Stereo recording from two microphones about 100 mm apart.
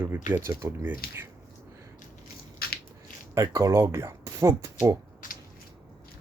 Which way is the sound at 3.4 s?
30° right (ahead or behind).